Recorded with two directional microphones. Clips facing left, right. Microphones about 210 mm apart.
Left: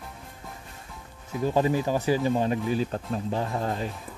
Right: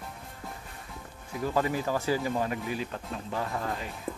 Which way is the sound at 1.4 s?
25° left (ahead or behind).